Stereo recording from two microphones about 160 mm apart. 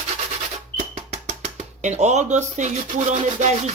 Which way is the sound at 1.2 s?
40° right (ahead or behind).